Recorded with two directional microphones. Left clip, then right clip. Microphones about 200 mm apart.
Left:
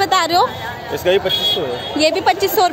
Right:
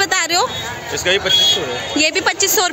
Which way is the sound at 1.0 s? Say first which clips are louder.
Left 1 dB; 40° left (ahead or behind).